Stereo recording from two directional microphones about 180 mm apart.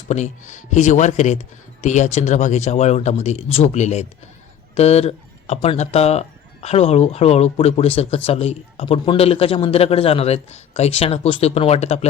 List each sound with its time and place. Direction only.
0.1 s speech: 40° left (ahead or behind)